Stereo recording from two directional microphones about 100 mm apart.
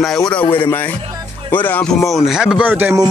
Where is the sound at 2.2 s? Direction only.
5° right (ahead or behind).